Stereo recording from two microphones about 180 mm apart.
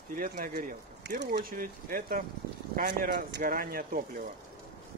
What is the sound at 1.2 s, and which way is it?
Speech, 60° right (ahead or behind).